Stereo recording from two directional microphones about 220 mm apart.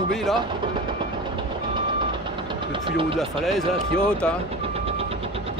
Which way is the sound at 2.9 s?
25° right (ahead or behind).